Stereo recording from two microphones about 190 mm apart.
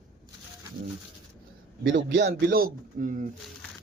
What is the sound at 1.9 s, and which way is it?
A man's voice, 70° right (ahead or behind).